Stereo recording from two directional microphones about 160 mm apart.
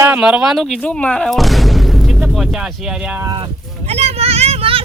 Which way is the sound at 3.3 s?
35° right (ahead or behind).